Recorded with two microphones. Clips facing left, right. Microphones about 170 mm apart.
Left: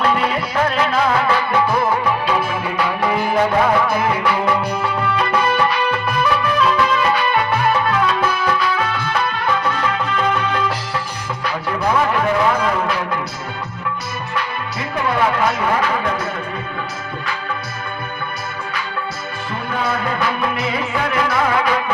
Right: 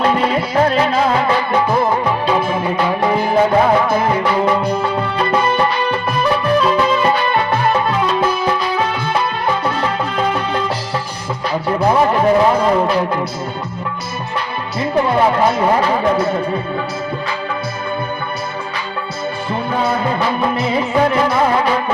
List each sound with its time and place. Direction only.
0.0 s music: 30° right (ahead or behind)
11.4 s speech: 30° right (ahead or behind)
14.9 s speech: 35° right (ahead or behind)
19.7 s music: 25° right (ahead or behind)